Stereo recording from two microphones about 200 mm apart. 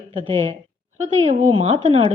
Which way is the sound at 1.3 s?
35° right (ahead or behind).